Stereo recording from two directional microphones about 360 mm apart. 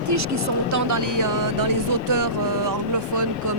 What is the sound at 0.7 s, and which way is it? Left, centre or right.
Speech, right.